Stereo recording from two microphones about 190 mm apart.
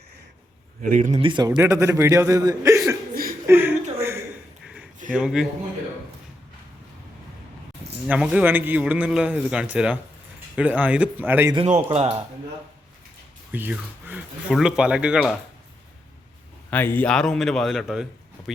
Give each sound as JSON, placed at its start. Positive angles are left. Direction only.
{"t": 0.8, "sound": "speech", "side_deg": -40}
{"t": 1.2, "sound": "a man's voice", "side_deg": -25}
{"t": 3.4, "sound": "a sound", "side_deg": -10}
{"t": 5.1, "sound": "a man's voice", "side_deg": -5}
{"t": 8.0, "sound": "a man's voice", "side_deg": -5}
{"t": 11.5, "sound": "speech", "side_deg": -35}
{"t": 13.5, "sound": "a man's voice", "side_deg": -10}
{"t": 16.6, "sound": "a man's voice", "side_deg": 10}